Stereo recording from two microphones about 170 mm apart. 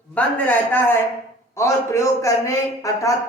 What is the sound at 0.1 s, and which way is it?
A man's voice, 10° left (ahead or behind).